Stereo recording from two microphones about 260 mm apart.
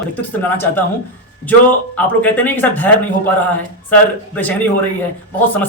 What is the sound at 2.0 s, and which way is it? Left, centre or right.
Speech, centre.